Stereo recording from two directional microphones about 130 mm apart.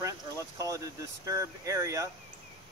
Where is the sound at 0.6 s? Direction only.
25° right (ahead or behind).